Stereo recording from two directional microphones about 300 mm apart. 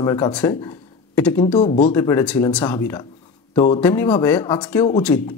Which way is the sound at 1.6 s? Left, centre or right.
Left.